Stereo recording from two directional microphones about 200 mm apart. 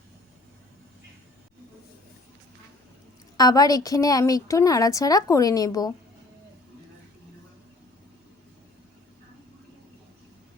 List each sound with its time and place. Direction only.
3.3 s a woman's voice: 20° left (ahead or behind)